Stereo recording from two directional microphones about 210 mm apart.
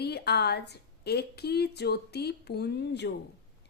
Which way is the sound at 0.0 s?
50° left (ahead or behind).